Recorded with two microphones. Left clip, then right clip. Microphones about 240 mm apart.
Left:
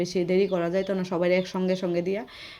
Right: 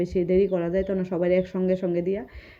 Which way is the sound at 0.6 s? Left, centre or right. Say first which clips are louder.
Right 1 dB; left.